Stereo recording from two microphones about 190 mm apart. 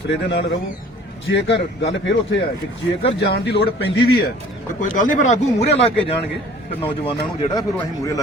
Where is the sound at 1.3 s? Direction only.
70° left (ahead or behind).